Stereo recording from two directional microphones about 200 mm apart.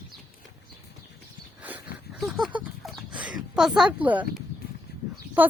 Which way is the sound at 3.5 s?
5° right (ahead or behind).